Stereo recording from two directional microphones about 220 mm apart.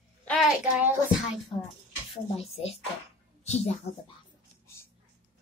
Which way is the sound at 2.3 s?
30° left (ahead or behind).